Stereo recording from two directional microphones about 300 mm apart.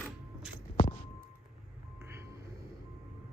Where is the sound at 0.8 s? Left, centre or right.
Left.